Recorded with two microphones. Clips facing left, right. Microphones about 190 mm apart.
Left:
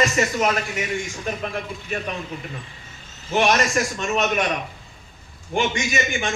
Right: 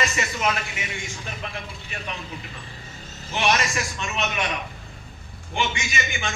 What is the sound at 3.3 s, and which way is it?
A man's voice, 45° left (ahead or behind).